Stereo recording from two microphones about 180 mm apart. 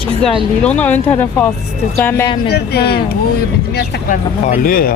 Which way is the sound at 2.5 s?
65° left (ahead or behind).